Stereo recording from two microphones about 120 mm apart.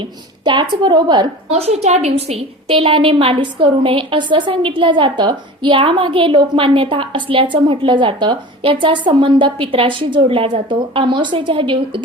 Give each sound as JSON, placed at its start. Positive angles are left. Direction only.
{"t": 0.0, "sound": "a child's voice", "side_deg": -40}
{"t": 1.5, "sound": "a woman's voice", "side_deg": -60}